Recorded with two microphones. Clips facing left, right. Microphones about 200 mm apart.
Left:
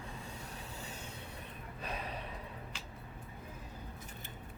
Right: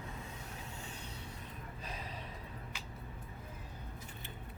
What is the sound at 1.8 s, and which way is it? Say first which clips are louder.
Gasp: left 6 dB; 65° left (ahead or behind).